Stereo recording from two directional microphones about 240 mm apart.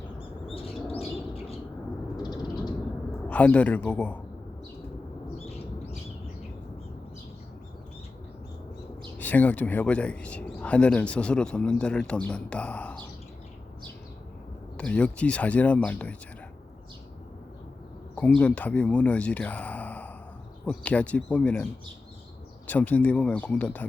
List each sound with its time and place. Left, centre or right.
0.5 s bird: left
3.2 s speech: centre
9.1 s speech: centre
14.8 s speech: centre
18.3 s speech: centre